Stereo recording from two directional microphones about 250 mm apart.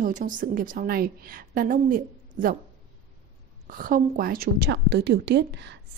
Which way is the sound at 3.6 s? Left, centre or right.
Right.